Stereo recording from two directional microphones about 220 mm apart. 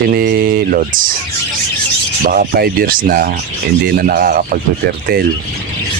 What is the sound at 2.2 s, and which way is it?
Speech, 40° right (ahead or behind).